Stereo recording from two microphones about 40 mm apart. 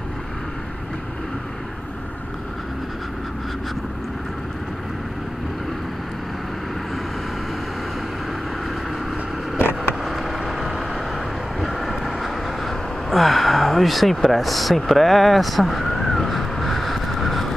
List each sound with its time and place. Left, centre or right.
9.6 s vehicle: left
10.0 s vehicle: centre
14.9 s a sound: centre